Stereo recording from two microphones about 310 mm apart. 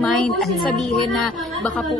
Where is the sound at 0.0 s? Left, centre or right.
Centre.